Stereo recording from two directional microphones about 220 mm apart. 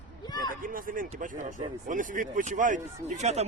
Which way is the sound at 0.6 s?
40° right (ahead or behind).